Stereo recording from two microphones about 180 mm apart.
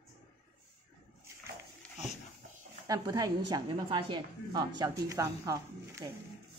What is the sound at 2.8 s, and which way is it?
A woman's voice, 20° right (ahead or behind).